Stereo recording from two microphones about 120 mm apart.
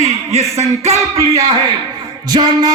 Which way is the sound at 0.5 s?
65° right (ahead or behind).